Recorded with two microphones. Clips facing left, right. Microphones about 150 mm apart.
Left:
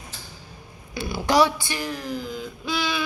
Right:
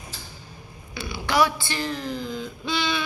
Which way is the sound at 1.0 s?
45° left (ahead or behind).